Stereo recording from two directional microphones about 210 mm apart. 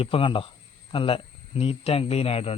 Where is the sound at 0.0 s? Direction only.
25° left (ahead or behind).